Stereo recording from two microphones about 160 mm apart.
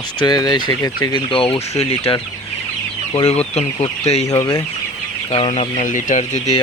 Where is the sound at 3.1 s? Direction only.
40° left (ahead or behind).